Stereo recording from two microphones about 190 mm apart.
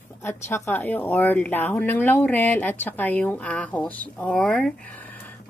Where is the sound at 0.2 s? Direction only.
10° left (ahead or behind).